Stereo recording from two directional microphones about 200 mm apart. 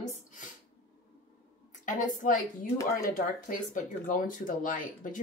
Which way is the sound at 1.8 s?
40° left (ahead or behind).